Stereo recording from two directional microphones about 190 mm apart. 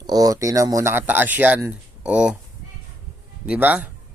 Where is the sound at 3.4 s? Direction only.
10° right (ahead or behind).